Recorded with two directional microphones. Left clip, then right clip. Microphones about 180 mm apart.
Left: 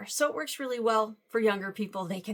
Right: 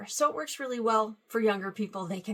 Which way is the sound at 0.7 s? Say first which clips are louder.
Even; 10° left (ahead or behind).